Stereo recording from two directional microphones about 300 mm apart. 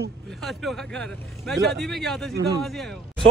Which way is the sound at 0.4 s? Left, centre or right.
Centre.